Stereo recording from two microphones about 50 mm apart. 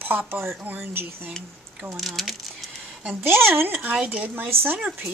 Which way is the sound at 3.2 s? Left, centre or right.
Right.